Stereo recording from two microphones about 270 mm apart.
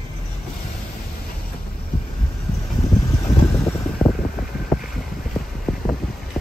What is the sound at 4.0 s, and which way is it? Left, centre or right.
Wind, centre.